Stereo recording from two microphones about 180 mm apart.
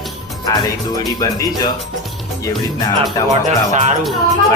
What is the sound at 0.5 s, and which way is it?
Speech, 20° left (ahead or behind).